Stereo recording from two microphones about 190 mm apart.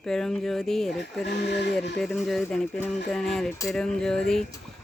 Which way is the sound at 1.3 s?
65° left (ahead or behind).